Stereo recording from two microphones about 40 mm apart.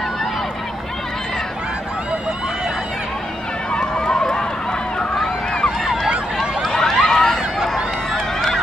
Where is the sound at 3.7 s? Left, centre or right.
Centre.